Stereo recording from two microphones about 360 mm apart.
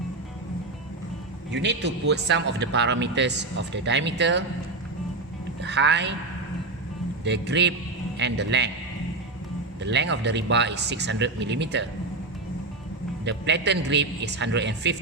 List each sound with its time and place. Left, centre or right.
1.5 s speech: right
5.6 s speech: right
7.3 s speech: right
9.8 s speech: right
13.2 s speech: right